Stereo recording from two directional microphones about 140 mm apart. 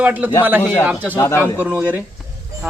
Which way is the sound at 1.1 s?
20° left (ahead or behind).